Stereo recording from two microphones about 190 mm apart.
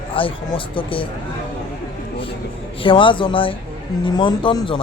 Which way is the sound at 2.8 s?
25° left (ahead or behind).